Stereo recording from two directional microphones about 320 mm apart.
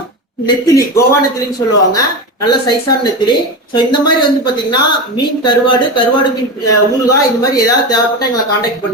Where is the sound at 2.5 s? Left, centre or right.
Centre.